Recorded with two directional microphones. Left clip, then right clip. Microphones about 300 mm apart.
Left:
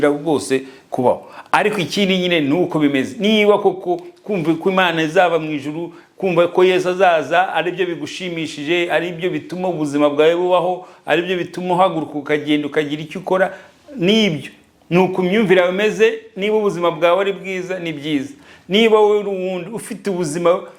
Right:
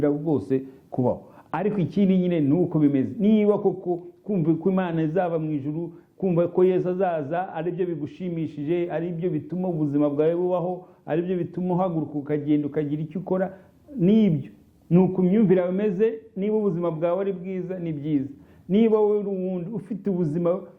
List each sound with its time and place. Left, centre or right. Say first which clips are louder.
0.3 s a man's voice: left 6 dB; centre
3.6 s speech: left 7 dB; left
3.9 s a man's voice: left 7 dB; centre